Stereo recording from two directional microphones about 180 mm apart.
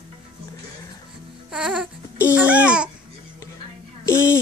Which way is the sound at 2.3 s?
5° right (ahead or behind).